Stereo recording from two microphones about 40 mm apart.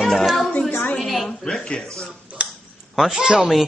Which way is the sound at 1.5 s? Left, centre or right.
Centre.